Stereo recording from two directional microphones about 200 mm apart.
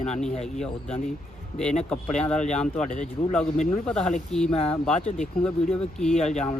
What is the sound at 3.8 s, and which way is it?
Speech, 5° left (ahead or behind).